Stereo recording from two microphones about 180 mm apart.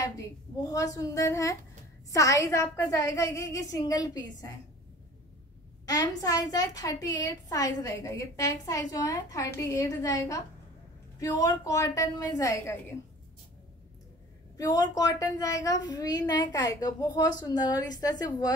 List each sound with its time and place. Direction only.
0.0 s a woman's voice: 20° left (ahead or behind)
5.9 s a woman's voice: 20° left (ahead or behind)
14.6 s a woman's voice: 20° left (ahead or behind)